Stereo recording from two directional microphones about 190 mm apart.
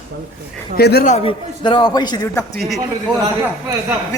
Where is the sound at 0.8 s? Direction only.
60° left (ahead or behind).